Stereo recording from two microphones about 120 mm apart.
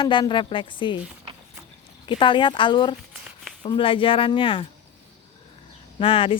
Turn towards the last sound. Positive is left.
turn(degrees=50)  # may be behind; listen again after turning